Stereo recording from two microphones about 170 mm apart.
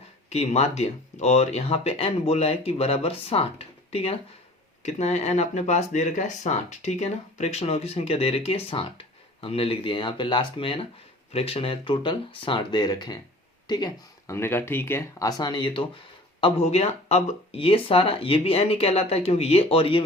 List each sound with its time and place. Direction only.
0.3 s speech: 40° left (ahead or behind)